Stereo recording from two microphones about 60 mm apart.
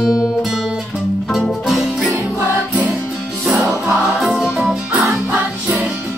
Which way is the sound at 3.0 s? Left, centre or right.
Centre.